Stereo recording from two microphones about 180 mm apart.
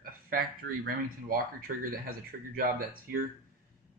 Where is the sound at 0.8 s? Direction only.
55° right (ahead or behind).